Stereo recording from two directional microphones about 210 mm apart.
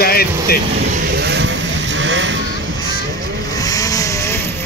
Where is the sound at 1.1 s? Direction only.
55° right (ahead or behind).